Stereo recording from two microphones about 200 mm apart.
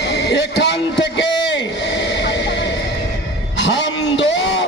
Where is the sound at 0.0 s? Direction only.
55° left (ahead or behind).